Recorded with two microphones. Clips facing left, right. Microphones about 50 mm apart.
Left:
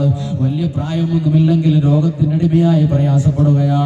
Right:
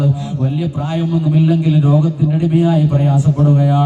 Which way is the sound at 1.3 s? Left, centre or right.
Centre.